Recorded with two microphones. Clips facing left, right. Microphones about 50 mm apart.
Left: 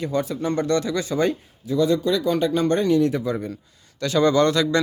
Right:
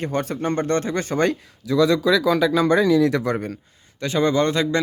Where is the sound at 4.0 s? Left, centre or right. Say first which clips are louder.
Left 2 dB; right.